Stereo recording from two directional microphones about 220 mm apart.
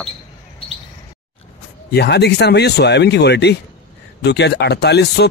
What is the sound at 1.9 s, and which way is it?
A man's voice, 50° left (ahead or behind).